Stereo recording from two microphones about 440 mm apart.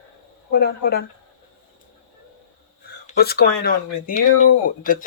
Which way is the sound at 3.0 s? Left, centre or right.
Left.